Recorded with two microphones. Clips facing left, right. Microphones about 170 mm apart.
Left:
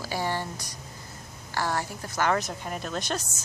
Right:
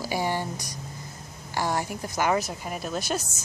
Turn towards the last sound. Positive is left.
turn(degrees=-5)  # may be behind; listen again after turning